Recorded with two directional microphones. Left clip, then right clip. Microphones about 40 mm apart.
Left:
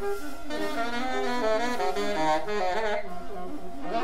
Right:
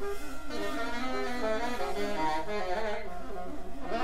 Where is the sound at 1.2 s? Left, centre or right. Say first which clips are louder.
Left 6 dB; centre.